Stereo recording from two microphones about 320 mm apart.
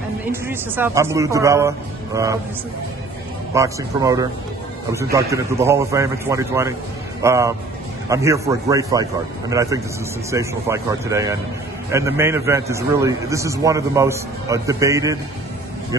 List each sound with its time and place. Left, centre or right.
0.3 s a man's voice: centre
3.5 s a man's voice: centre